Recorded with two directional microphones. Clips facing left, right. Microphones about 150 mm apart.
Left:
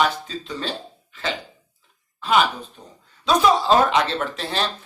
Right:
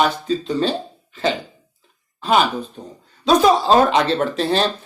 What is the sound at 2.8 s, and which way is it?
Speech, 30° right (ahead or behind).